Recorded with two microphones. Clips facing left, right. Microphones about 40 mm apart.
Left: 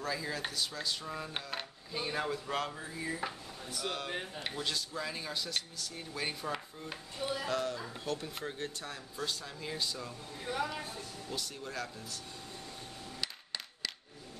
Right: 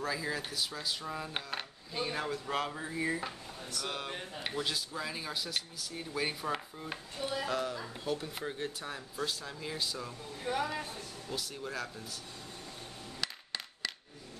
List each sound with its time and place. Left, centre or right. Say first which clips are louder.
0.0 s speech: right 1 dB; centre
2.7 s speech: right 5 dB; right
3.2 s speech: even; centre
4.4 s speech: right 6 dB; centre
10.4 s speech: right 2 dB; right
11.2 s speech: right 3 dB; centre
13.2 s a sound: right 2 dB; centre